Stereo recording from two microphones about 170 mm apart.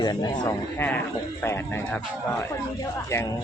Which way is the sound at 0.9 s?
10° left (ahead or behind).